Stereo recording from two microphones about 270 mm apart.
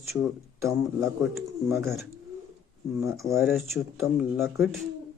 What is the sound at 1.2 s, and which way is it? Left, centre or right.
Speech, centre.